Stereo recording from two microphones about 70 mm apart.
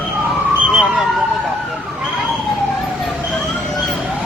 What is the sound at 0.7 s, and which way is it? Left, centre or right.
Emergency vehicle, centre.